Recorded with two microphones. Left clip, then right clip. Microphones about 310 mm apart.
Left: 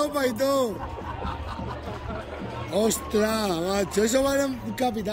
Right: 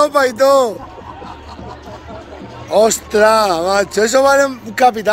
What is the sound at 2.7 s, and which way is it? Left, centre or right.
Speech, centre.